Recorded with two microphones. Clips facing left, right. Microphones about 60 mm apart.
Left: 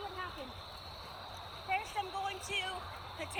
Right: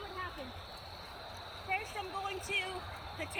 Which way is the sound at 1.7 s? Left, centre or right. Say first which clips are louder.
Left 2 dB; right.